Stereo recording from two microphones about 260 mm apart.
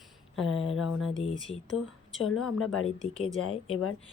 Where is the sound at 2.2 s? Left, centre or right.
Left.